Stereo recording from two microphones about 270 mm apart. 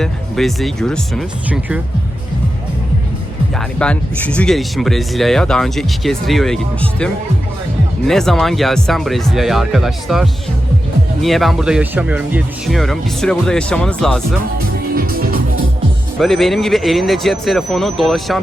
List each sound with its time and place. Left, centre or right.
0.0 s speech: centre
3.5 s speech: centre
8.0 s speech: centre
14.9 s music: right
16.1 s speech: centre